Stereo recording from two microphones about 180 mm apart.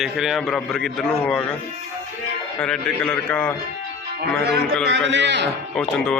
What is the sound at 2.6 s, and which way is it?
Speech, 5° left (ahead or behind).